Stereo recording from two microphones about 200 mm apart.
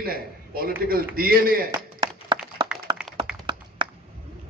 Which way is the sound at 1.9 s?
25° right (ahead or behind).